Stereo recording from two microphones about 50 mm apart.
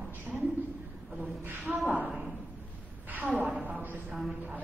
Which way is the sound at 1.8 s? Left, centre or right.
Right.